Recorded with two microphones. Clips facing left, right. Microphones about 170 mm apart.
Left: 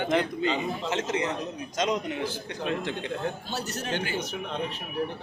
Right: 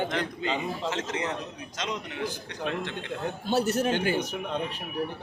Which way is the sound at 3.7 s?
55° right (ahead or behind).